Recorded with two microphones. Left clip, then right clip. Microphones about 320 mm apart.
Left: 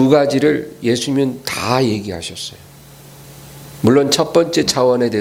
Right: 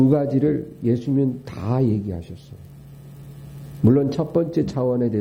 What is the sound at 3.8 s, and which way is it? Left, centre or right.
Speech, centre.